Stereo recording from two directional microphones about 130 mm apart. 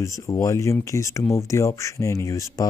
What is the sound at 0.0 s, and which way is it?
Speech, 25° left (ahead or behind).